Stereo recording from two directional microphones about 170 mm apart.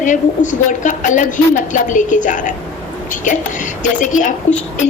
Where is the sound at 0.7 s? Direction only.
50° left (ahead or behind).